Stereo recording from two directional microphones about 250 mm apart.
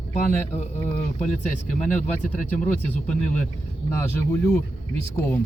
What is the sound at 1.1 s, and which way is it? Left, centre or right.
Speech, left.